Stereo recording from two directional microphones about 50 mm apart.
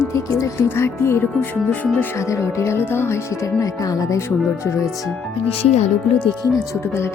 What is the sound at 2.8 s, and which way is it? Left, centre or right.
Speech, left.